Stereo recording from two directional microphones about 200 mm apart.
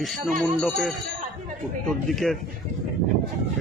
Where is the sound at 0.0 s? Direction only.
Centre (ahead or behind).